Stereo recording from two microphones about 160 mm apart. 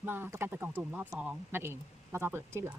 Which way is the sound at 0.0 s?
15° right (ahead or behind).